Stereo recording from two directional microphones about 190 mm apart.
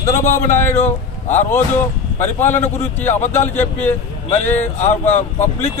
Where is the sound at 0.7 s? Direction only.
35° left (ahead or behind).